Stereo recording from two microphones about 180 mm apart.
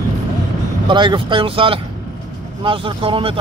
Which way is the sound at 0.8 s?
25° right (ahead or behind).